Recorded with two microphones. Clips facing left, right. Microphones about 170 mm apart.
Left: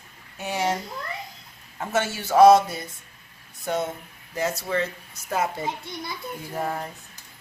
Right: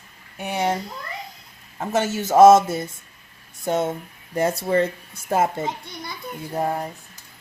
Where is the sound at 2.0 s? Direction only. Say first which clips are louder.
Right 3 dB; 45° right (ahead or behind).